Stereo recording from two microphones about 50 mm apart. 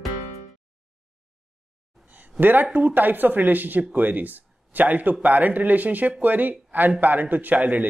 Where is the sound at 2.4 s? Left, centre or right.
Right.